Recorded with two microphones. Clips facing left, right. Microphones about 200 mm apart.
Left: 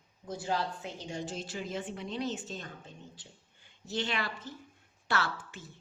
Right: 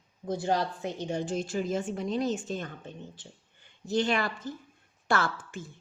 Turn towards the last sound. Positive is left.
turn(degrees=-50)  # may be behind; listen again after turning